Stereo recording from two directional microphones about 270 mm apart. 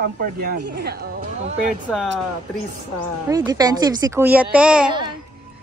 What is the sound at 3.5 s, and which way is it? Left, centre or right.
Speech, centre.